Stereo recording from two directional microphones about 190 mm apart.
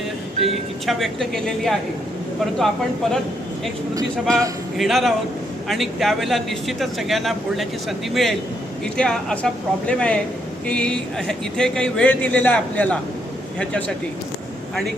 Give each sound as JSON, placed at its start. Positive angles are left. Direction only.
{"t": 0.4, "sound": "speech", "side_deg": 0}
{"t": 3.9, "sound": "speech", "side_deg": -15}
{"t": 4.8, "sound": "speech", "side_deg": 0}